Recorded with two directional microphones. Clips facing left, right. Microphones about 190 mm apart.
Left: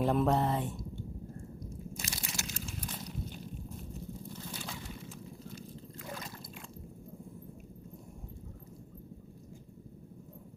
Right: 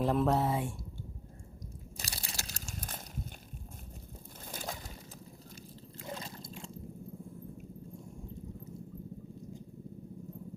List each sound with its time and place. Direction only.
0.0 s speech: centre (ahead or behind)
2.0 s crunch: 35° right (ahead or behind)
4.5 s a sound: 45° right (ahead or behind)